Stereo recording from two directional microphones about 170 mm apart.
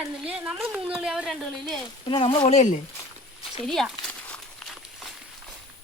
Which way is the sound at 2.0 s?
30° left (ahead or behind).